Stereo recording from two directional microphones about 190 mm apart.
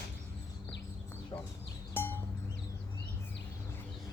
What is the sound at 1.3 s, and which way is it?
Chicken, 20° left (ahead or behind).